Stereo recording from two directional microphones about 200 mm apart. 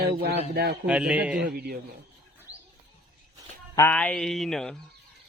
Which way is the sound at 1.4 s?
50° right (ahead or behind).